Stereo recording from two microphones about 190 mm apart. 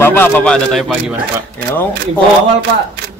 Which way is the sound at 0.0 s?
10° left (ahead or behind).